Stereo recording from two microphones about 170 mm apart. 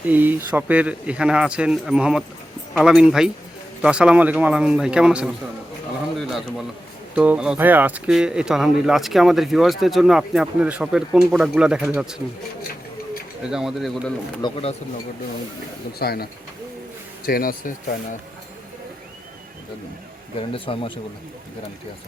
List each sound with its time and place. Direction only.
0.0 s speech: 10° right (ahead or behind)
6.1 s a sound: centre (ahead or behind)
7.2 s speech: 5° right (ahead or behind)
13.5 s speech: 5° right (ahead or behind)
14.4 s speech: 35° left (ahead or behind)
16.0 s speech: 65° left (ahead or behind)
20.5 s speech: 30° left (ahead or behind)